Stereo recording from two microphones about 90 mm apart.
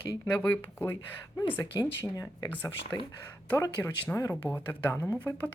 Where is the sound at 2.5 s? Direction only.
25° left (ahead or behind).